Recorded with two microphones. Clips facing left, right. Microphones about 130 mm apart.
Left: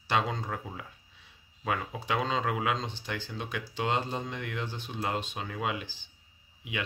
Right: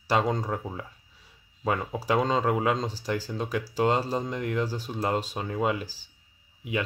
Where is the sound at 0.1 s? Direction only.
40° right (ahead or behind).